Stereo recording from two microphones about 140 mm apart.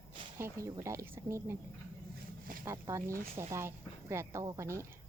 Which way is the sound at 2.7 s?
20° right (ahead or behind).